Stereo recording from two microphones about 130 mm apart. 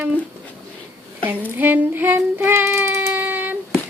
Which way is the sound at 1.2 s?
15° right (ahead or behind).